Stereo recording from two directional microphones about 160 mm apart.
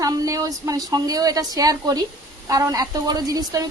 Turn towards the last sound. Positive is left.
turn(degrees=-20)  # may be behind; listen again after turning